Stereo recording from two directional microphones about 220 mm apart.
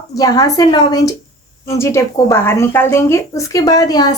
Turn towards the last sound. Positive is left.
turn(degrees=15)  # may be behind; listen again after turning